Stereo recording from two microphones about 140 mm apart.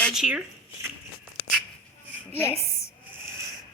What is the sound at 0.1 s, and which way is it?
Speech, 5° right (ahead or behind).